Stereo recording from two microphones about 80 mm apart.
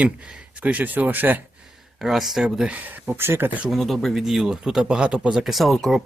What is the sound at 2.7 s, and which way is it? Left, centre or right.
Speech, right.